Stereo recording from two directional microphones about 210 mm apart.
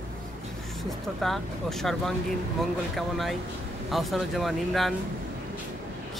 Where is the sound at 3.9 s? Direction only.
Centre (ahead or behind).